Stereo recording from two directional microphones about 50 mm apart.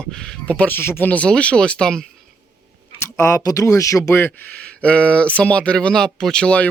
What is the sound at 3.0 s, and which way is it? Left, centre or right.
Speech, left.